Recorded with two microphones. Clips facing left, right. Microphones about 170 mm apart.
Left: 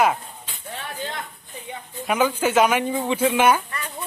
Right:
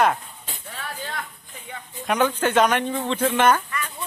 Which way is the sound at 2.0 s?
5° left (ahead or behind).